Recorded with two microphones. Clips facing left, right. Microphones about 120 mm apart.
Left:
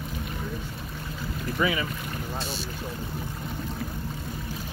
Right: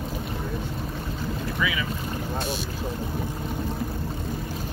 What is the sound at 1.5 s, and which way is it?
Speech, 45° left (ahead or behind).